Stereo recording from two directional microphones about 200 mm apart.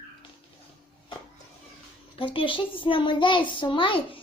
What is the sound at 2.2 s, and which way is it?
A child's voice, 25° left (ahead or behind).